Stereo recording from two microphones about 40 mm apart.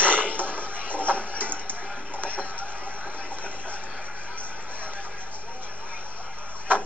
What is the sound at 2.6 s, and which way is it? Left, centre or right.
Vehicle, right.